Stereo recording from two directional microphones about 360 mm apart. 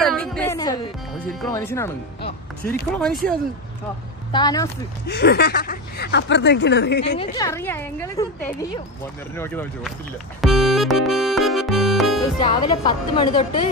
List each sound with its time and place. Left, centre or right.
0.0 s music: centre
1.5 s a woman's voice: centre
4.3 s a woman's voice: centre
5.0 s speech: left
7.2 s a woman's voice: centre
9.4 s speech: centre
10.4 s music: centre
12.4 s a woman's voice: centre